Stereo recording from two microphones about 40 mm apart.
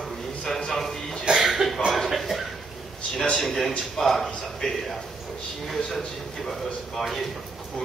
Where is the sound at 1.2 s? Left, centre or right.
Centre.